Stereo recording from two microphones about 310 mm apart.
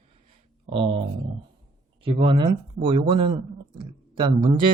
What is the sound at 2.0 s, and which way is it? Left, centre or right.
Speech, centre.